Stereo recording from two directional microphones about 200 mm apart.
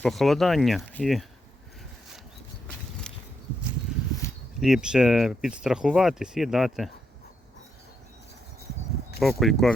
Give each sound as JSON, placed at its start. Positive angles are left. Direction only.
{"t": 0.0, "sound": "speech", "side_deg": 0}
{"t": 3.1, "sound": "a sound", "side_deg": 5}
{"t": 4.6, "sound": "speech", "side_deg": -5}
{"t": 9.4, "sound": "speech", "side_deg": 0}